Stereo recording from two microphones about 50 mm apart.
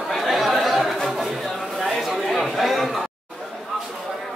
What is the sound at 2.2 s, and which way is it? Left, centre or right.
Chatter, centre.